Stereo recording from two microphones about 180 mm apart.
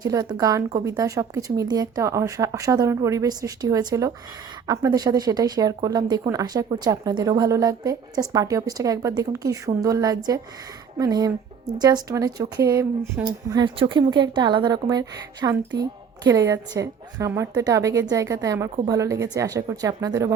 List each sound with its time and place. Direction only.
0.0 s a woman's voice: 20° right (ahead or behind)